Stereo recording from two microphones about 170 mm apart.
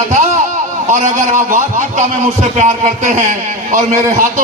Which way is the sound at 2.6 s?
45° right (ahead or behind).